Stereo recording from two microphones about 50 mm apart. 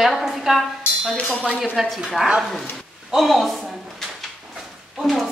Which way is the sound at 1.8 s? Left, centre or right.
Centre.